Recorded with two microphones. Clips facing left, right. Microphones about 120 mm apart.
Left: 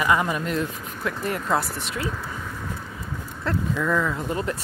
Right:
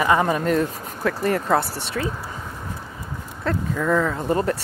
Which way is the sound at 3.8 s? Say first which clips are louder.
Right 6 dB; 35° right (ahead or behind).